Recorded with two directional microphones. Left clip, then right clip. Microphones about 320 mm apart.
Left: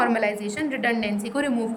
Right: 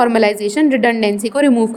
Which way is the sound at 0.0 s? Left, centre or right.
Centre.